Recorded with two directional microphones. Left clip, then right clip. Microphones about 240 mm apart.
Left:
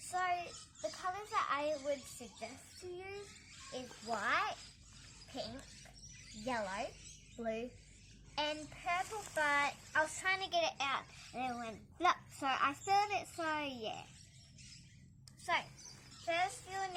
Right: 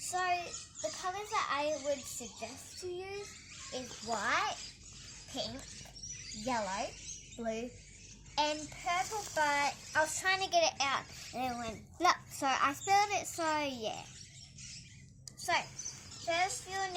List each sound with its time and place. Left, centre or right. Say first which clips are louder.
0.1 s a sound: right 3 dB; centre
3.7 s speech: right 3 dB; centre
16.2 s speech: right 3 dB; centre